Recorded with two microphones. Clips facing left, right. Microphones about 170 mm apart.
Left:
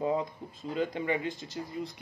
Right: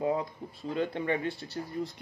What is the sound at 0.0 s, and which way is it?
Speech, 20° left (ahead or behind).